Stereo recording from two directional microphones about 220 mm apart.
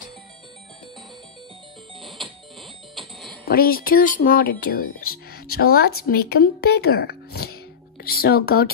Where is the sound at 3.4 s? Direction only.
40° left (ahead or behind).